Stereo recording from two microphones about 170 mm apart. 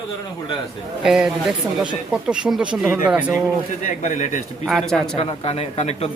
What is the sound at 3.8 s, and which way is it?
Speech, 45° left (ahead or behind).